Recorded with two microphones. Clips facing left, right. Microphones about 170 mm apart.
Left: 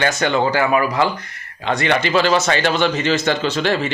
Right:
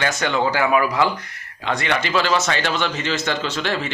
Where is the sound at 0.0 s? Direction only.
Centre (ahead or behind).